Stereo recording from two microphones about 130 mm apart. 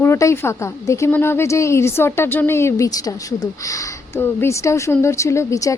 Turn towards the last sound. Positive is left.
turn(degrees=25)  # may be behind; listen again after turning